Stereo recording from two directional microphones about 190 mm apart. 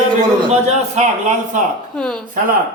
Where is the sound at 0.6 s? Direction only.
40° right (ahead or behind).